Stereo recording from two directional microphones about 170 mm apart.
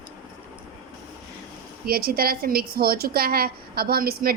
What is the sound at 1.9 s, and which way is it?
A woman's voice, 60° right (ahead or behind).